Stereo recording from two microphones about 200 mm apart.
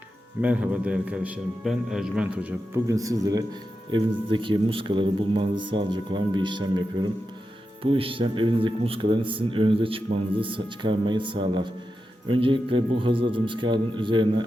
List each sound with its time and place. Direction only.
0.4 s a man's voice: 5° right (ahead or behind); by 14.4 s 25° right (ahead or behind)